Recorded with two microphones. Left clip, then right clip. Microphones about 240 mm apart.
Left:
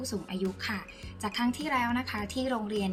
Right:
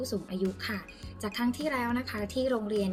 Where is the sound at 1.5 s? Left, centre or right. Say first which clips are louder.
Left 1 dB; centre.